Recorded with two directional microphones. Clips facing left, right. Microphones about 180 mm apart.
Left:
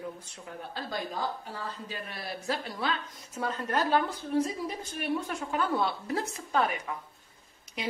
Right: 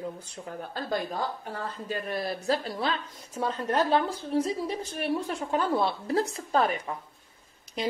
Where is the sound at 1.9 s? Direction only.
40° right (ahead or behind).